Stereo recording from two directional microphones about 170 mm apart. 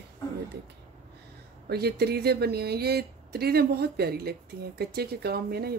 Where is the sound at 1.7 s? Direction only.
70° right (ahead or behind).